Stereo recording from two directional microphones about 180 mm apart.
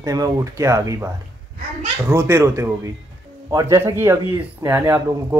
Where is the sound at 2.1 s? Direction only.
15° right (ahead or behind).